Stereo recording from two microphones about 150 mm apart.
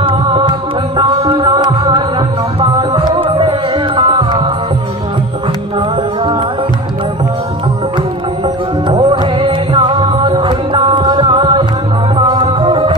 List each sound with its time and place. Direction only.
0.0 s music: 35° right (ahead or behind)
9.4 s music: 35° right (ahead or behind)